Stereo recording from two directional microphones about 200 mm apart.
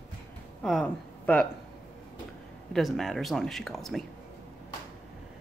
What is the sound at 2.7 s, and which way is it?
Speech, centre (ahead or behind).